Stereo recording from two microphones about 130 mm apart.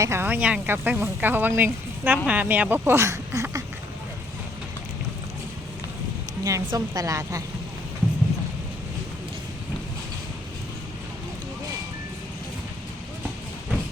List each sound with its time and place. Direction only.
0.0 s speech: 20° right (ahead or behind)
6.4 s a woman's voice: 25° right (ahead or behind)